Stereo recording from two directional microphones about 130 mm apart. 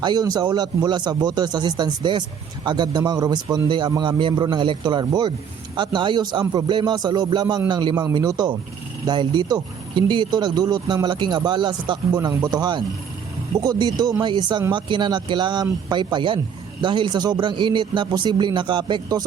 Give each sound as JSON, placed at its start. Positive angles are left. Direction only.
{"t": 0.0, "sound": "speech", "side_deg": -30}